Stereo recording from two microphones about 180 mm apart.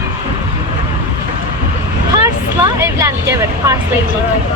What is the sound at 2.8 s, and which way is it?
Speech, 15° right (ahead or behind).